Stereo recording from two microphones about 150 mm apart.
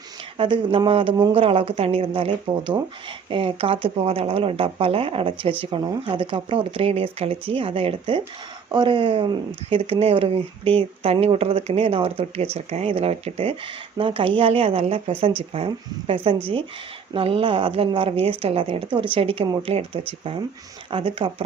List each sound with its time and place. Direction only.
0.3 s speech: 35° right (ahead or behind)